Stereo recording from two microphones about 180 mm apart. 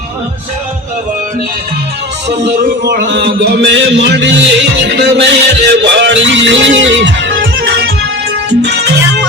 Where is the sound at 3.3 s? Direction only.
65° right (ahead or behind); by 8.8 s 80° right.